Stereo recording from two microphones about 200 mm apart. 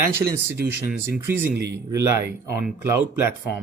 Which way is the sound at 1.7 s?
15° right (ahead or behind).